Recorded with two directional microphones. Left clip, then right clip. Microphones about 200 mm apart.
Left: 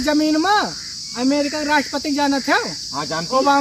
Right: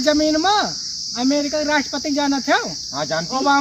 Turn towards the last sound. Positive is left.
turn(degrees=-20)  # may be behind; listen again after turning